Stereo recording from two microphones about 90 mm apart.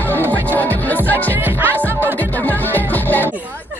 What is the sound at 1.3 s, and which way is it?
Music, 20° right (ahead or behind).